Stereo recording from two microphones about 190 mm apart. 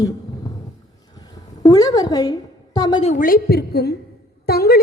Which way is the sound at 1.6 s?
20° left (ahead or behind).